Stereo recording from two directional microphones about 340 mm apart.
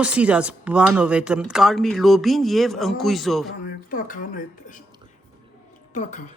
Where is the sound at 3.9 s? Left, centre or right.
Left.